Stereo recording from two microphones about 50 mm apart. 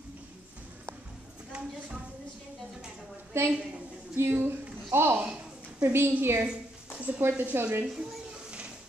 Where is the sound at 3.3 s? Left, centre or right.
Right.